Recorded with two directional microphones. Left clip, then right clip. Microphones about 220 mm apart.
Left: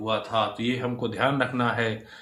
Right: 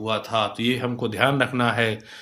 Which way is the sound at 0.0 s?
40° right (ahead or behind).